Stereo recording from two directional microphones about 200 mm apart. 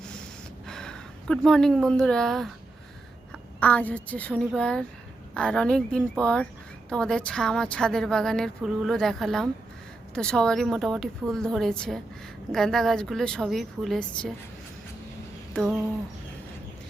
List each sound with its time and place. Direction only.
0.7 s speech: 5° left (ahead or behind)
3.6 s a woman's voice: 5° left (ahead or behind)
15.5 s a woman's voice: centre (ahead or behind)